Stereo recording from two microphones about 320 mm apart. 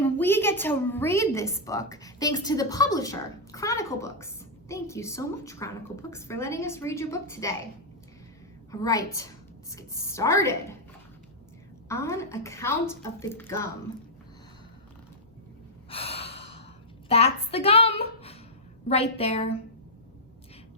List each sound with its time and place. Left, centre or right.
0.0 s a woman's voice: centre
8.7 s a woman's voice: centre
11.9 s a woman's voice: centre
15.9 s gasp: centre
17.1 s a woman's voice: centre